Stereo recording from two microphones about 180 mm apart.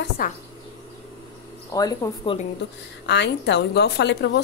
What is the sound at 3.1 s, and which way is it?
A woman's voice, 70° left (ahead or behind).